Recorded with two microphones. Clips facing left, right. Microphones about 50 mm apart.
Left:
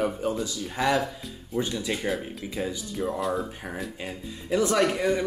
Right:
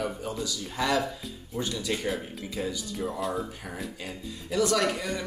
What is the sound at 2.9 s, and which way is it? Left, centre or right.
Speech, centre.